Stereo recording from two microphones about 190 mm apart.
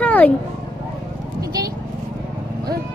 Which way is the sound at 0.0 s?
10° left (ahead or behind).